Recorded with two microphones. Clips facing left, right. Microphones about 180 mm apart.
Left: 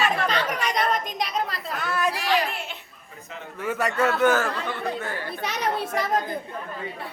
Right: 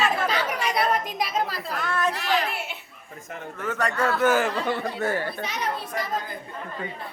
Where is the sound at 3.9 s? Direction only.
25° left (ahead or behind).